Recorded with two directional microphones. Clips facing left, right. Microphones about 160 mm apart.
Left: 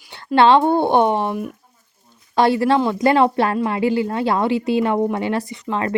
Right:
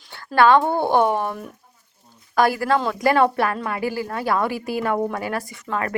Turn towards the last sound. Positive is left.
turn(degrees=25)  # may be behind; listen again after turning